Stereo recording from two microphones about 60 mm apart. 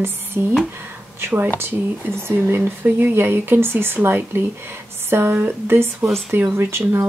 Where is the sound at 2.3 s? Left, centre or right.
Right.